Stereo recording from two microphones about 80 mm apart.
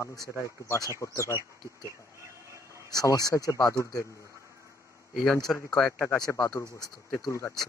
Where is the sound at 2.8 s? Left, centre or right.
Left.